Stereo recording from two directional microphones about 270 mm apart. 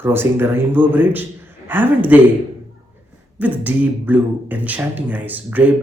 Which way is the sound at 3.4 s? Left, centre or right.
Centre.